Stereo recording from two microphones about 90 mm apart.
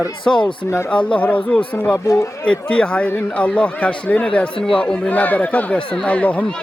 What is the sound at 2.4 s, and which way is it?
Speech, 10° left (ahead or behind).